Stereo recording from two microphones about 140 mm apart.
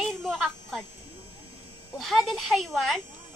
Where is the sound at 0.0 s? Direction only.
Centre (ahead or behind).